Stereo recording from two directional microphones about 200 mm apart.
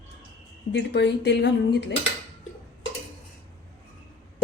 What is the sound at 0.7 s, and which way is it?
Speech, 60° left (ahead or behind).